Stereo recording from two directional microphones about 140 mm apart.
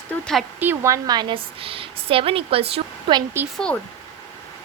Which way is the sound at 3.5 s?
5° left (ahead or behind).